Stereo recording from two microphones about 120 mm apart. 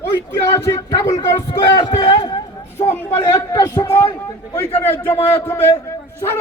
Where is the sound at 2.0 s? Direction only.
40° left (ahead or behind).